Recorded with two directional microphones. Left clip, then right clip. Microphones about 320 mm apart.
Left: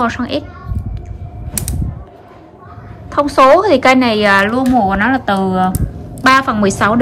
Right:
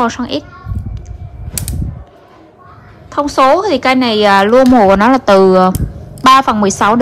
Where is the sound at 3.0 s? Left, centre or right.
Centre.